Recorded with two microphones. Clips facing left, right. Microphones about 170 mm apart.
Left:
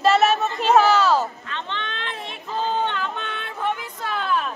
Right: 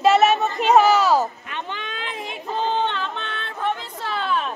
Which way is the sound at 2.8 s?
10° left (ahead or behind).